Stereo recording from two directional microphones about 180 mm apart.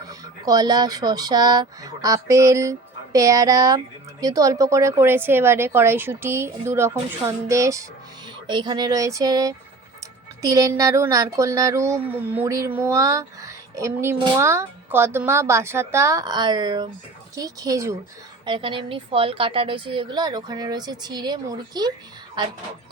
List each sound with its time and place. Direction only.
0.1 s speech: 20° right (ahead or behind)
18.4 s speech: 25° right (ahead or behind)